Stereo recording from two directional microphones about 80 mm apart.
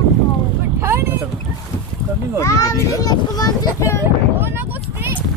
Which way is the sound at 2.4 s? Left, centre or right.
Left.